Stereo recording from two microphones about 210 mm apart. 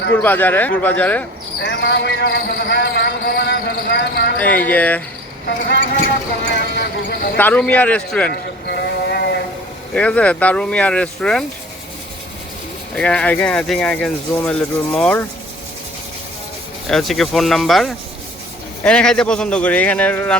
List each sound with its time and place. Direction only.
0.1 s a man's voice: 10° left (ahead or behind)
1.6 s speech: 55° left (ahead or behind)
4.4 s a man's voice: 10° left (ahead or behind)
5.5 s a man's voice: 50° left (ahead or behind)
7.3 s a man's voice: 5° left (ahead or behind)
8.3 s sheep: 50° left (ahead or behind)
9.9 s speech: 5° left (ahead or behind)
13.0 s speech: 5° left (ahead or behind)
16.8 s speech: centre (ahead or behind)